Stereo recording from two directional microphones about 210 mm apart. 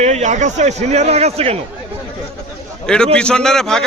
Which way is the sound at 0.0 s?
30° right (ahead or behind).